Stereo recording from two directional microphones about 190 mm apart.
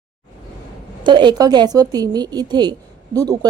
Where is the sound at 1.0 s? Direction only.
25° right (ahead or behind).